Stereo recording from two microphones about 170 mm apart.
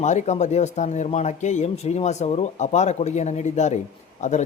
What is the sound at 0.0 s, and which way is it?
Speech, 45° left (ahead or behind).